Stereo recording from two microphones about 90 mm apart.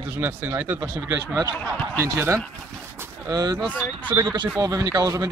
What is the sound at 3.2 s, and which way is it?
Speech, 40° right (ahead or behind).